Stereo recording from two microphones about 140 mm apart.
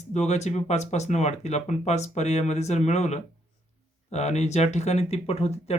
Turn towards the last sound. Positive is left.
turn(degrees=50)  # may be behind; listen again after turning